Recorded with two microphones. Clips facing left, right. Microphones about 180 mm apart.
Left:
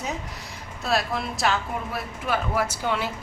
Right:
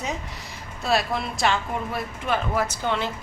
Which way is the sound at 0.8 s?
Centre (ahead or behind).